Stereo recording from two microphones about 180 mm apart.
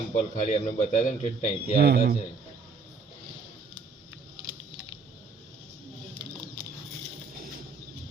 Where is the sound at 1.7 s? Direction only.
60° right (ahead or behind).